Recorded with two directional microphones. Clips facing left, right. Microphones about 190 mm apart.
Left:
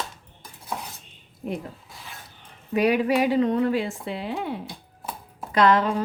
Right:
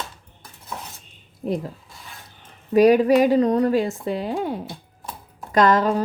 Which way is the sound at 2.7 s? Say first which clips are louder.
Right 7 dB; 40° right (ahead or behind).